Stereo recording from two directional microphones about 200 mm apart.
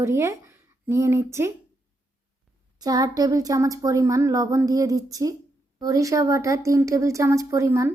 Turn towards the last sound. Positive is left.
turn(degrees=-15)  # may be behind; listen again after turning